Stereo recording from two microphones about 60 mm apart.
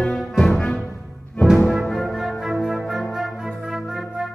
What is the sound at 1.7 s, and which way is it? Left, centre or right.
Music, centre.